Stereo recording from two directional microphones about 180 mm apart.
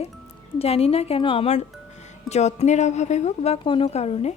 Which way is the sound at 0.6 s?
35° left (ahead or behind).